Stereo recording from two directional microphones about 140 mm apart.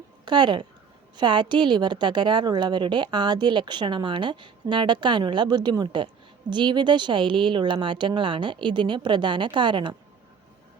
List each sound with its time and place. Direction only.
0.3 s a woman's voice: 30° right (ahead or behind)